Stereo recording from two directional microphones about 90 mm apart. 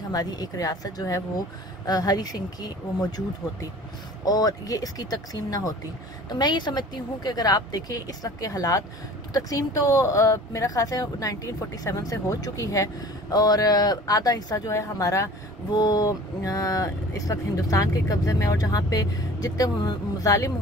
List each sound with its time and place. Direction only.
0.1 s a woman's voice: 45° left (ahead or behind)
4.2 s a woman's voice: 45° left (ahead or behind)
15.7 s speech: 45° left (ahead or behind)